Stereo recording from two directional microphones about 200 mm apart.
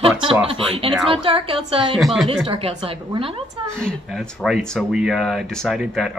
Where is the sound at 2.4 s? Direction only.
30° right (ahead or behind).